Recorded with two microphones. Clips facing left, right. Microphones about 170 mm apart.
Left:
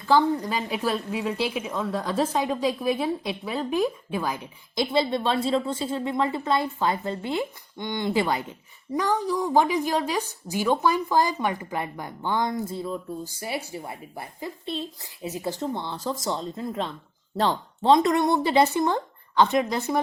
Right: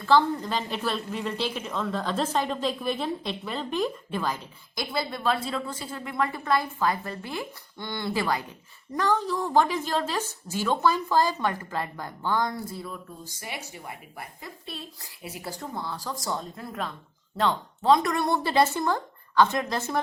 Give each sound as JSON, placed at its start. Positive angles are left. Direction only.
{"t": 0.0, "sound": "a woman's voice", "side_deg": 15}